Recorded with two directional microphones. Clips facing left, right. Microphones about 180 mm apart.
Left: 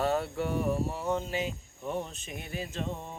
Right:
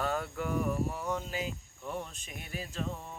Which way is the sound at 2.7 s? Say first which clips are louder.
Left 1 dB; 25° left (ahead or behind).